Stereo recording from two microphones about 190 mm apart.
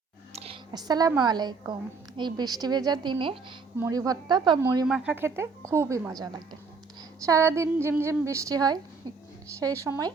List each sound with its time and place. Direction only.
0.3 s a sound: 30° right (ahead or behind)
1.2 s a woman's voice: 20° right (ahead or behind)
4.9 s a woman's voice: 5° right (ahead or behind)